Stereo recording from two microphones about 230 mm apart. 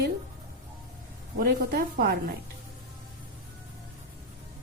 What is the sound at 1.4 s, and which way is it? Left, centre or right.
Speech, right.